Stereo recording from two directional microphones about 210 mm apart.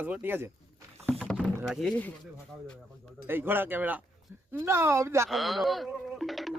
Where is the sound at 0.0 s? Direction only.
10° right (ahead or behind).